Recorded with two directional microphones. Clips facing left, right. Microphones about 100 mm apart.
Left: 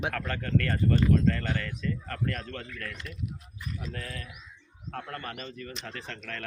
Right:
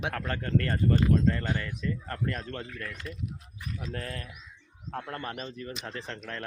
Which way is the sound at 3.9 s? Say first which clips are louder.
Right 5 dB; 40° right (ahead or behind).